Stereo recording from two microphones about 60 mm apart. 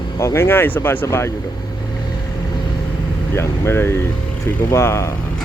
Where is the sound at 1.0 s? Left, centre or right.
Left.